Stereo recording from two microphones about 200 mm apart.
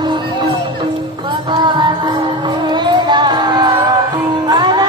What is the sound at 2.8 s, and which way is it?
Music, 20° right (ahead or behind).